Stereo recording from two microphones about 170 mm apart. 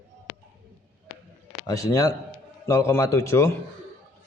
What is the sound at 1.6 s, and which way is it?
A man's voice, 20° left (ahead or behind).